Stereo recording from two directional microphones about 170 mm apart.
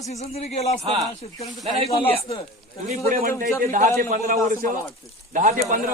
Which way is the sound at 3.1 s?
55° right (ahead or behind).